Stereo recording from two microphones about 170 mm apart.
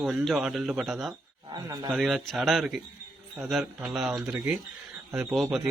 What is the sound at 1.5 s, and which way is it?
Speech, 20° right (ahead or behind).